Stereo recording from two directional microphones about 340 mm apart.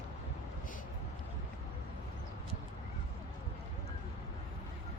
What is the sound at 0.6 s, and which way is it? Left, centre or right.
Vehicle, left.